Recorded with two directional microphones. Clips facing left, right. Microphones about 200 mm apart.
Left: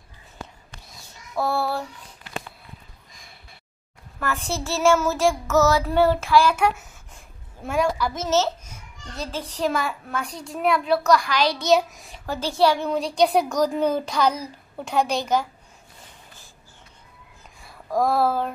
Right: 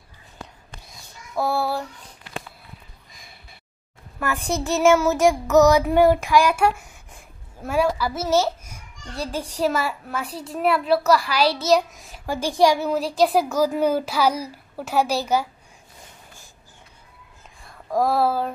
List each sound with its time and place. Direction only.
1.3 s child singing: centre (ahead or behind)
4.2 s a woman's voice: 15° right (ahead or behind)
12.3 s a woman's voice: 15° right (ahead or behind)
17.6 s a sound: centre (ahead or behind)